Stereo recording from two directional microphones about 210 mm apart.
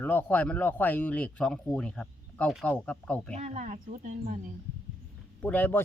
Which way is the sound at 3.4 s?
35° right (ahead or behind).